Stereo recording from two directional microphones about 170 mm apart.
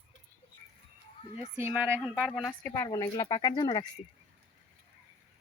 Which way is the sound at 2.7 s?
20° left (ahead or behind).